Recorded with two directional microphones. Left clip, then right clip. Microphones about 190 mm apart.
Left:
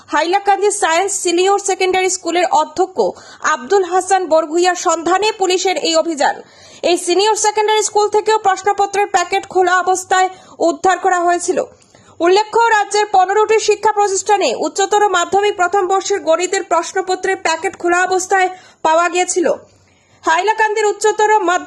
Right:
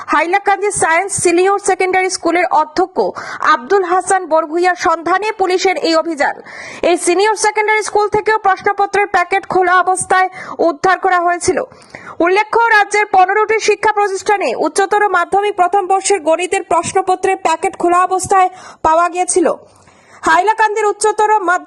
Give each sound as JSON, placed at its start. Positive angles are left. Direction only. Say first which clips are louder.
{"t": 0.1, "sound": "a woman's voice", "louder": "right 1 dB", "side_deg": -25}